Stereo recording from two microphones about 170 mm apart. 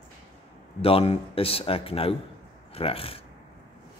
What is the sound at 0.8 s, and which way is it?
Speech, 35° left (ahead or behind).